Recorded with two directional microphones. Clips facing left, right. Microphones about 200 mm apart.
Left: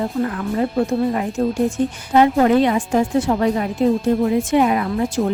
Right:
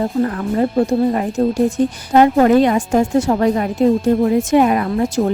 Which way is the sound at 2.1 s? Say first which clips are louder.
Right 3 dB; 45° right (ahead or behind).